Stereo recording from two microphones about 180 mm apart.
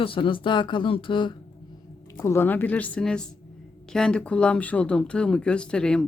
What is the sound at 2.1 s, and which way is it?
A woman's voice, 15° left (ahead or behind).